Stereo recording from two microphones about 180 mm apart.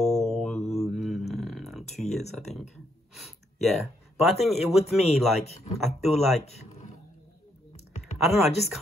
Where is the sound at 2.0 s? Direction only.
Centre (ahead or behind).